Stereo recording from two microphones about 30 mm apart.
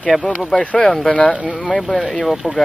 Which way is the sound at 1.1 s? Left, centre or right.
Left.